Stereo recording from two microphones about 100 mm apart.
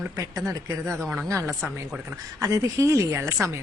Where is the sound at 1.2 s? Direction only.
30° right (ahead or behind).